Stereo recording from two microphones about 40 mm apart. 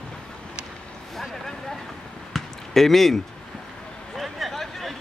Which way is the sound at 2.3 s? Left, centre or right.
Centre.